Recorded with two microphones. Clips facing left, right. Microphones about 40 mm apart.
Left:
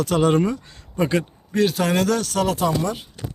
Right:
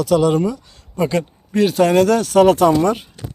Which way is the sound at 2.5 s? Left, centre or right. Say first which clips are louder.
Right 8 dB; right.